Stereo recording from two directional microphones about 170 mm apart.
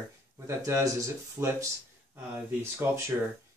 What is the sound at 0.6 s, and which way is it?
Speech, 15° right (ahead or behind).